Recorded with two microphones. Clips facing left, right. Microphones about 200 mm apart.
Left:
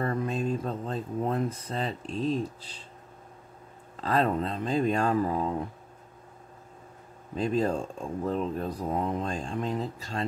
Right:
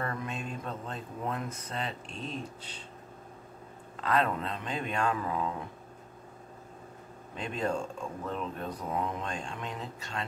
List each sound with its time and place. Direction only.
0.0 s speech: 35° left (ahead or behind)
3.9 s speech: 35° left (ahead or behind)
7.3 s speech: 35° left (ahead or behind)